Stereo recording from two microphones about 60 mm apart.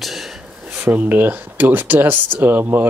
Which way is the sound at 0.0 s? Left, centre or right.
Centre.